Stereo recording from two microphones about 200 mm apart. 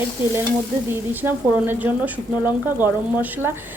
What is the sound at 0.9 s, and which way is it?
A woman's voice, 10° right (ahead or behind).